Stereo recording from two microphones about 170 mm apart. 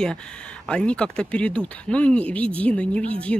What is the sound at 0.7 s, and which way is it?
Speech, 5° left (ahead or behind).